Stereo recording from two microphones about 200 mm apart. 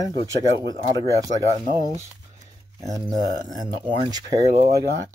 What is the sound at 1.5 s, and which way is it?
Speech, 45° right (ahead or behind).